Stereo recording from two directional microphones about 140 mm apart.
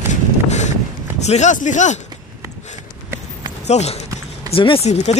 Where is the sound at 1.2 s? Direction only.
55° left (ahead or behind).